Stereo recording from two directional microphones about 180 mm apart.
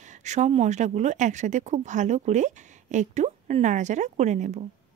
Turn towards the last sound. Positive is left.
turn(degrees=-40)  # may be behind; listen again after turning